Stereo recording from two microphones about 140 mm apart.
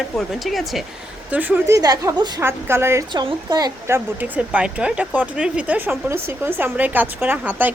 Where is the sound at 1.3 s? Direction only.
10° right (ahead or behind); by 2.3 s 30° right (ahead or behind).